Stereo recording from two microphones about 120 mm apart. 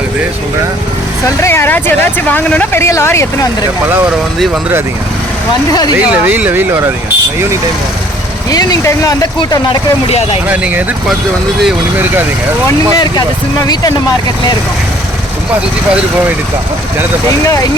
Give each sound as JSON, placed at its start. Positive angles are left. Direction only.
{"t": 1.4, "sound": "speech", "side_deg": 20}
{"t": 6.1, "sound": "speech", "side_deg": -15}
{"t": 8.4, "sound": "speech", "side_deg": 30}
{"t": 10.1, "sound": "speech", "side_deg": 60}
{"t": 10.5, "sound": "speech", "side_deg": -10}